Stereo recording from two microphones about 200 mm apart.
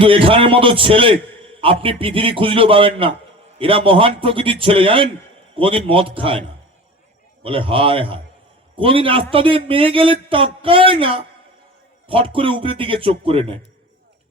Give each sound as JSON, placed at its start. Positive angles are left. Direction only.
{"t": 0.0, "sound": "speech", "side_deg": -25}
{"t": 7.4, "sound": "speech", "side_deg": -25}